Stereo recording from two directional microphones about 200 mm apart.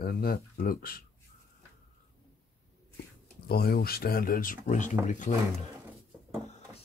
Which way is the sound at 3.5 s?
50° left (ahead or behind).